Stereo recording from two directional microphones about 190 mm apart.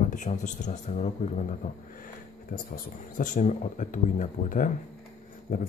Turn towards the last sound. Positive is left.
turn(degrees=50)  # may be behind; listen again after turning